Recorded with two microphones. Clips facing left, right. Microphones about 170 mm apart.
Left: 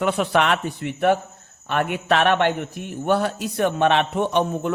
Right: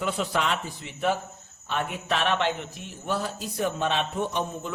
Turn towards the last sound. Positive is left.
turn(degrees=65)  # may be behind; listen again after turning